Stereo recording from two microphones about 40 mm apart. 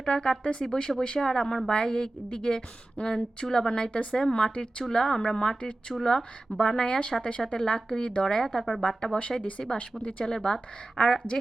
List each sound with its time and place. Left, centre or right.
0.0 s a woman's voice: centre
7.4 s a woman's voice: centre
9.7 s a woman's voice: left